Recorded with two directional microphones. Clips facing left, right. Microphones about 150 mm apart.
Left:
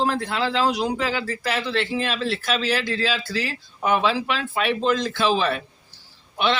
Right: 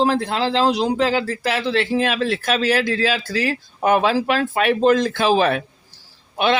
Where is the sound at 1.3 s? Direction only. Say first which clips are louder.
Right 4 dB; 45° right (ahead or behind).